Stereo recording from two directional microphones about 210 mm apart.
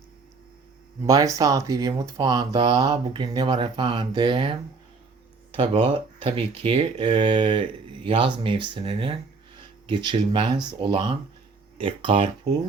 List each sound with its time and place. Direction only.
1.0 s speech: 15° right (ahead or behind)
5.5 s speech: 25° right (ahead or behind)